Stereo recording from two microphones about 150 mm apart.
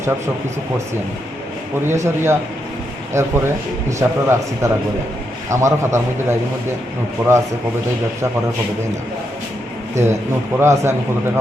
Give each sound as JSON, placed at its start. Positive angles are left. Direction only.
{"t": 1.8, "sound": "a man's voice", "side_deg": -15}
{"t": 7.2, "sound": "a man's voice", "side_deg": -10}
{"t": 9.9, "sound": "a man's voice", "side_deg": -20}